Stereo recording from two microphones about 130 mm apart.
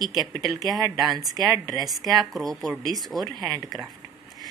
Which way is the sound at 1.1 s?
Centre (ahead or behind).